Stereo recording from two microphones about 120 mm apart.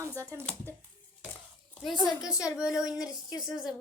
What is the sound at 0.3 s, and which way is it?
Speech, 15° left (ahead or behind).